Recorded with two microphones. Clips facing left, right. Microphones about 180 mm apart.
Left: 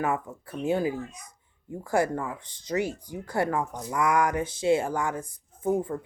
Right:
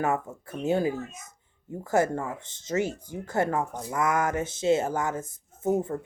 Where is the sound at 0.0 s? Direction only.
25° right (ahead or behind).